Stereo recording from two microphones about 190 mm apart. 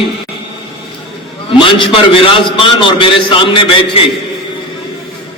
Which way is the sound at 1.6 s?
25° left (ahead or behind).